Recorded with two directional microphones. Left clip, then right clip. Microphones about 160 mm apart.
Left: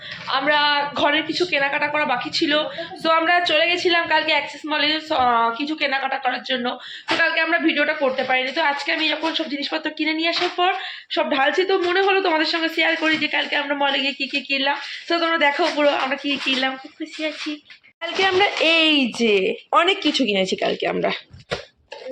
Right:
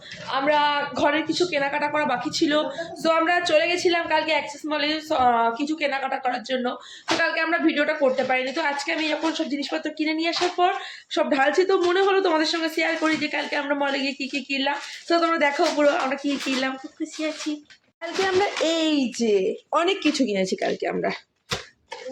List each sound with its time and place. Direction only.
0.3 s a woman's voice: 5° right (ahead or behind)